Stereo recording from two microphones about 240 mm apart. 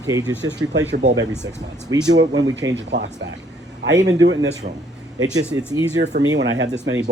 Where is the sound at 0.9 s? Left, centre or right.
Right.